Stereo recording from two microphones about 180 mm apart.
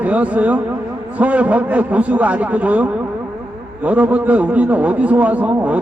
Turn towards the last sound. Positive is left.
turn(degrees=-5)  # may be behind; listen again after turning